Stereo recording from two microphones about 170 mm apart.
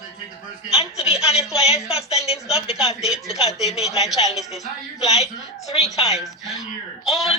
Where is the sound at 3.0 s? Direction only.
Centre (ahead or behind).